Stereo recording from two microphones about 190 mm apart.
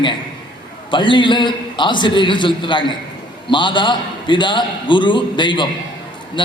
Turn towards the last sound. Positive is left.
turn(degrees=25)  # may be behind; listen again after turning